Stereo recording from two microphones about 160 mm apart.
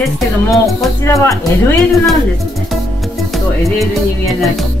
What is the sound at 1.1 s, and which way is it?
Speech, 20° left (ahead or behind).